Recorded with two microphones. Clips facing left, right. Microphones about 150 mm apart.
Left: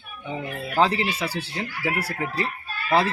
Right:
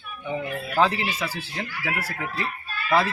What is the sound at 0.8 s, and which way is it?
Speech, 30° left (ahead or behind).